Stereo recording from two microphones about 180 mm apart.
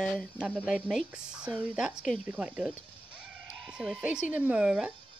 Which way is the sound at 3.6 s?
5° right (ahead or behind).